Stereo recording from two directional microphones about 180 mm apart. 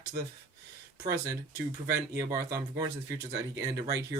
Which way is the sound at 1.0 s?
15° right (ahead or behind).